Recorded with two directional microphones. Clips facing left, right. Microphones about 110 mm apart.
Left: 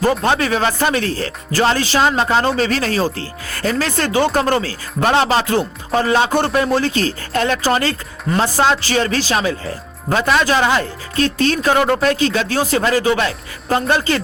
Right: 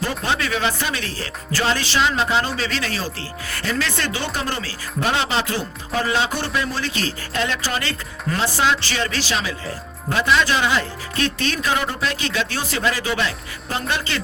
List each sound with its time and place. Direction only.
0.0 s speech: 45° left (ahead or behind)